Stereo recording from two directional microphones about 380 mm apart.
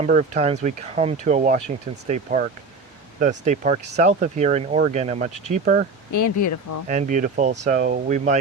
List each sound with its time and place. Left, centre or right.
0.0 s speech: centre
6.1 s speech: left
6.8 s speech: centre